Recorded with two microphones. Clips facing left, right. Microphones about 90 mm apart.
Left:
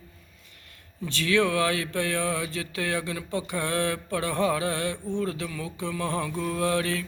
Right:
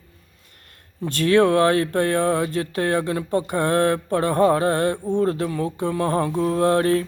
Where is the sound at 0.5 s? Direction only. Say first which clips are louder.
Right 1 dB; 50° right (ahead or behind).